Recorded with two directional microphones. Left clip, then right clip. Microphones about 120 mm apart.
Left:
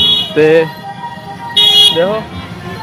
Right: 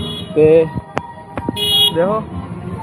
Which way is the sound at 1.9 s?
25° left (ahead or behind).